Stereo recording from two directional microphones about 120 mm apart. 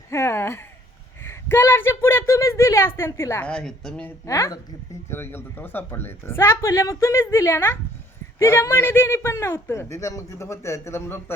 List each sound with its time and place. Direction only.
0.1 s a sound: 25° left (ahead or behind)
1.2 s a woman's voice: 20° left (ahead or behind)
3.4 s a woman's voice: 5° left (ahead or behind)
4.3 s a man's voice: 25° left (ahead or behind)